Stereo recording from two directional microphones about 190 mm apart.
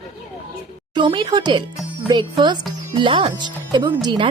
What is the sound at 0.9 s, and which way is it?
Speech, 25° right (ahead or behind).